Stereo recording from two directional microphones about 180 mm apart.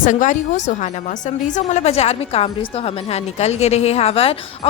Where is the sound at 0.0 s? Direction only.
45° left (ahead or behind).